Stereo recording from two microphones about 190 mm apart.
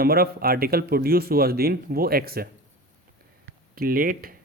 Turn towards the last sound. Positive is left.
turn(degrees=-50)  # may be behind; listen again after turning